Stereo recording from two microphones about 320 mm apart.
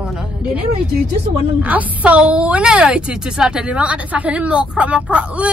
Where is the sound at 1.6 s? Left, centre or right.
Centre.